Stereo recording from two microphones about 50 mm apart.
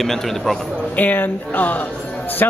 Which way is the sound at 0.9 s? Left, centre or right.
Left.